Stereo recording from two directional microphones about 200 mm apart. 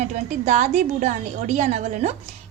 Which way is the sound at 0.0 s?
40° right (ahead or behind).